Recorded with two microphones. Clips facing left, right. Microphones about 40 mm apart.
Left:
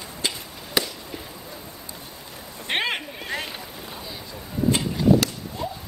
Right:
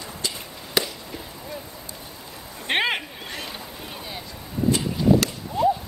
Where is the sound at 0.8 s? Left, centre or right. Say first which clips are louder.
Right 1 dB; centre.